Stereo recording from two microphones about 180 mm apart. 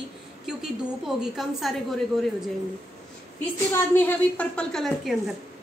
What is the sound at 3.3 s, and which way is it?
A woman's voice, 10° left (ahead or behind).